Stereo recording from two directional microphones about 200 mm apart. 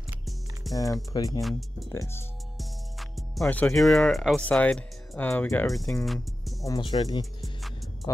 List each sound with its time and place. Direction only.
0.7 s speech: 15° left (ahead or behind)
2.5 s speech: centre (ahead or behind)
6.6 s speech: 20° left (ahead or behind)
7.4 s music: centre (ahead or behind)